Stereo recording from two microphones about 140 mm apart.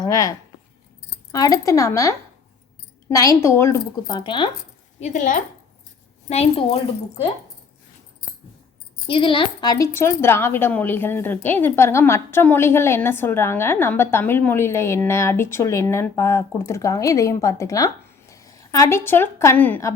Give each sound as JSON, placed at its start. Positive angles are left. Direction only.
{"t": 0.0, "sound": "a woman's voice", "side_deg": 25}
{"t": 4.0, "sound": "speech", "side_deg": 30}
{"t": 4.9, "sound": "a woman's voice", "side_deg": 60}
{"t": 6.2, "sound": "a woman's voice", "side_deg": 45}
{"t": 9.0, "sound": "a woman's voice", "side_deg": 40}